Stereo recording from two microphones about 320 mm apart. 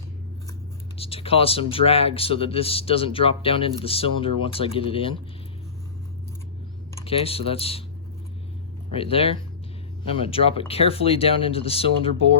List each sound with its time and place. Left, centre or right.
0.9 s speech: centre
6.9 s speech: centre
8.9 s speech: centre